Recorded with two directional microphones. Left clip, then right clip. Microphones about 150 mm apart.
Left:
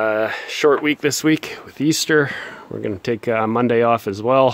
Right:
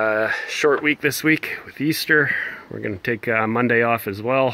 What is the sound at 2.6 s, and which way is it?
Speech, 15° left (ahead or behind).